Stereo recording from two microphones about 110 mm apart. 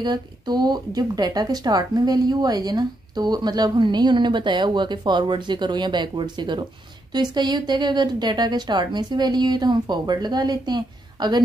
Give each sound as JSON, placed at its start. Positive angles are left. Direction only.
{"t": 0.0, "sound": "speech", "side_deg": -40}